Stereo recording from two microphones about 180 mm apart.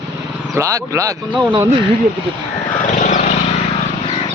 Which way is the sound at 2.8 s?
45° left (ahead or behind).